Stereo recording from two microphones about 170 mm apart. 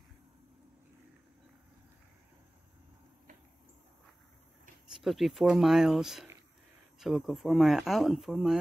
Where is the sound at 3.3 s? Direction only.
50° right (ahead or behind).